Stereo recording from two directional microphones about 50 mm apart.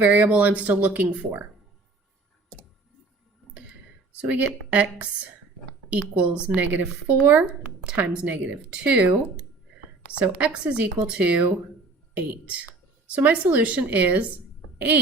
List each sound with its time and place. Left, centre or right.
0.0 s speech: right
4.2 s speech: right
6.6 s speech: right
10.4 s speech: right